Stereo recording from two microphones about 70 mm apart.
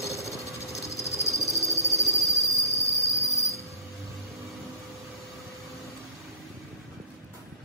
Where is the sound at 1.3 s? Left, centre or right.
Left.